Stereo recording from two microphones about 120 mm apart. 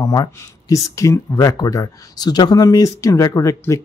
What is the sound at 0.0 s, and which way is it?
Speech, 30° left (ahead or behind).